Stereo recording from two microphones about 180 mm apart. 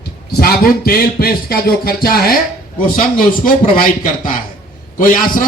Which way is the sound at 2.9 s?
50° left (ahead or behind).